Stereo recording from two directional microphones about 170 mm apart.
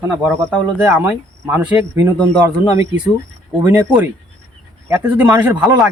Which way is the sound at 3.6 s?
10° right (ahead or behind).